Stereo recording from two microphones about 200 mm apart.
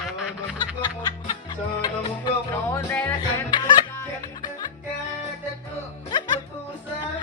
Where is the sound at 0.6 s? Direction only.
20° left (ahead or behind).